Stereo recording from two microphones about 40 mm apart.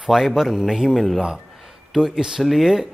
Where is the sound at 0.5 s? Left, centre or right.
Centre.